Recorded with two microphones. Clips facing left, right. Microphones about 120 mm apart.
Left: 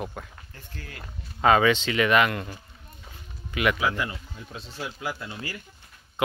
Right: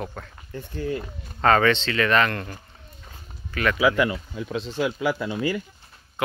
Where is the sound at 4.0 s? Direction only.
90° right.